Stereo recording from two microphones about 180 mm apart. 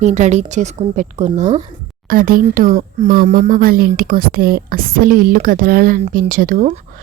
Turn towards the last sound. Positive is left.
turn(degrees=-45)  # may be behind; listen again after turning